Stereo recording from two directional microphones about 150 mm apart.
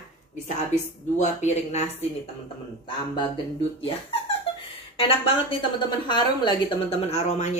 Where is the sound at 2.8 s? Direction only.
35° left (ahead or behind).